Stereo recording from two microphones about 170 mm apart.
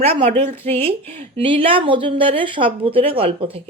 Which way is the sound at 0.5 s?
15° left (ahead or behind).